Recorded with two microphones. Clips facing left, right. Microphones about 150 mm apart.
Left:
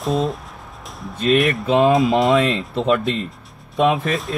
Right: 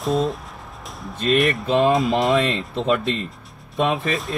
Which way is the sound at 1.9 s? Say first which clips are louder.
Left 3 dB; centre (ahead or behind).